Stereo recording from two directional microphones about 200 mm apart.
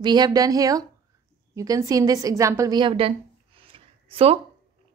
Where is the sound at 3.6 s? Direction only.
25° right (ahead or behind).